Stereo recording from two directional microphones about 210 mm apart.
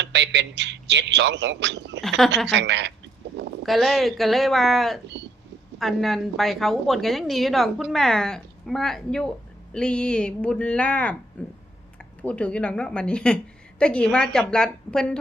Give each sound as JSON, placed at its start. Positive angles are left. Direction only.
{"t": 0.0, "sound": "a man's voice", "side_deg": -55}
{"t": 2.0, "sound": "a woman's voice", "side_deg": 0}
{"t": 2.5, "sound": "a man's voice", "side_deg": -55}
{"t": 3.7, "sound": "a woman's voice", "side_deg": 0}